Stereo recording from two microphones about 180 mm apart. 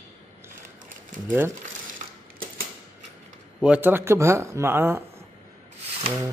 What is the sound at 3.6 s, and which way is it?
Speech, 5° right (ahead or behind).